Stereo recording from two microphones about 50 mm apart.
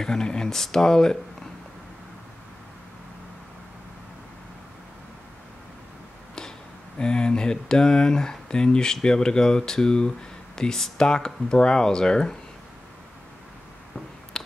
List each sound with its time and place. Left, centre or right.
0.0 s speech: centre
7.0 s speech: centre
14.3 s a sound: centre